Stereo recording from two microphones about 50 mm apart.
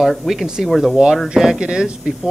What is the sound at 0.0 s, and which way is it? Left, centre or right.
Speech, centre.